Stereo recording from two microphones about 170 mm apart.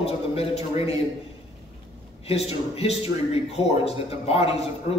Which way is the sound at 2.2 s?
35° left (ahead or behind).